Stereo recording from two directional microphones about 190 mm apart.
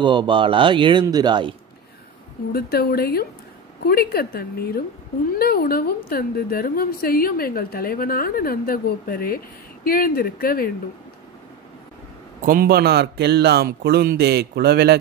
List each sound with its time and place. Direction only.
0.0 s speech: 25° right (ahead or behind)
2.5 s a woman's voice: 55° left (ahead or behind)
12.4 s a man's voice: 50° right (ahead or behind)